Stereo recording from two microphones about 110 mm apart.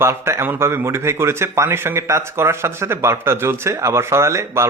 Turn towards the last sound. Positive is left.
turn(degrees=-25)  # may be behind; listen again after turning